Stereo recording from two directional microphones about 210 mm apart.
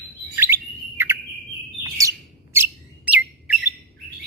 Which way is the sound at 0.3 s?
10° right (ahead or behind).